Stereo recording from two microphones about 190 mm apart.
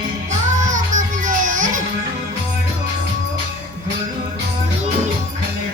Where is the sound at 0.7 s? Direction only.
40° right (ahead or behind).